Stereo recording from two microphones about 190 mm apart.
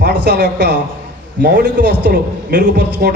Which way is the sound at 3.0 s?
55° right (ahead or behind).